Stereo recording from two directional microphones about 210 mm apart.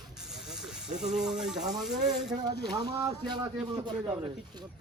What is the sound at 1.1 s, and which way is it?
Speech, 5° right (ahead or behind).